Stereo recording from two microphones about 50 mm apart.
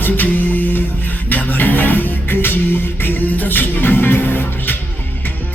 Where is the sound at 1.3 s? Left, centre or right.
Left.